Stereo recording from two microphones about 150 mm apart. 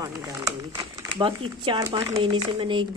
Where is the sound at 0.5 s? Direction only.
30° right (ahead or behind).